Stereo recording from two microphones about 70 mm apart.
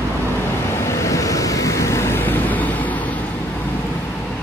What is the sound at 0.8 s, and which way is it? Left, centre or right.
Vehicle, left.